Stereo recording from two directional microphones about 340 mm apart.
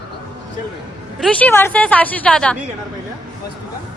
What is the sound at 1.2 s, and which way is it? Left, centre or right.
A woman's voice, centre.